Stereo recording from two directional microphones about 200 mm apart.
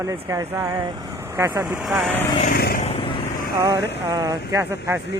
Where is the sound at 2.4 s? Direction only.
50° left (ahead or behind).